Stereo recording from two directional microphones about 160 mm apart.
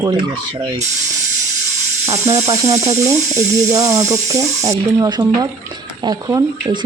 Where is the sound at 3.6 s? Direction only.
20° right (ahead or behind).